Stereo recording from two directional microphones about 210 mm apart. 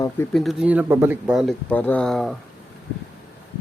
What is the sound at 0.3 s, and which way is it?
Speech, 5° right (ahead or behind).